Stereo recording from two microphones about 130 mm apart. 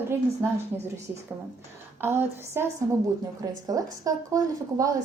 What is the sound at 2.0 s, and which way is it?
A woman's voice, 15° right (ahead or behind).